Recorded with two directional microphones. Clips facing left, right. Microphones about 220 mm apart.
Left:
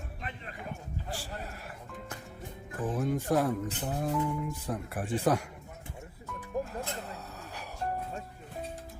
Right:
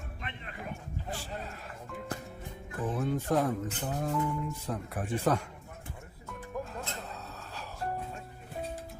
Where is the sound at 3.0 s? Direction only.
10° left (ahead or behind).